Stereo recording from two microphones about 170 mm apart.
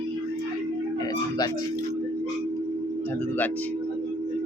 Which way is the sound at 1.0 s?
25° left (ahead or behind).